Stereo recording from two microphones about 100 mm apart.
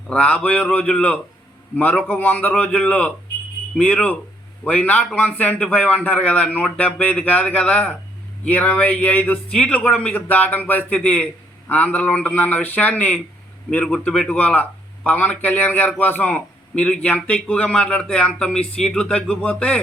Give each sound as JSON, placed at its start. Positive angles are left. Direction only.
{"t": 0.1, "sound": "a man's voice", "side_deg": 10}